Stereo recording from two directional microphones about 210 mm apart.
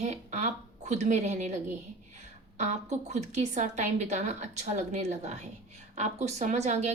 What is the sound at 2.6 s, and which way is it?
A woman's voice, 35° right (ahead or behind).